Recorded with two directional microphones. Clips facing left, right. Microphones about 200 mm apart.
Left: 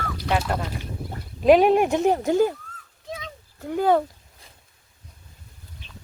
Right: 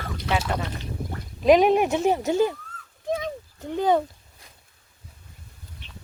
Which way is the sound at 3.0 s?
50° right (ahead or behind).